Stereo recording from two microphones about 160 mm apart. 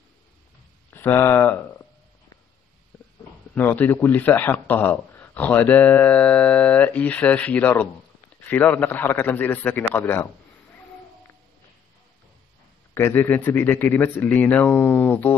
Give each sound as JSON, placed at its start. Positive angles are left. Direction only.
{"t": 0.8, "sound": "speech", "side_deg": 15}
{"t": 3.5, "sound": "a man's voice", "side_deg": 10}
{"t": 12.9, "sound": "a man's voice", "side_deg": 15}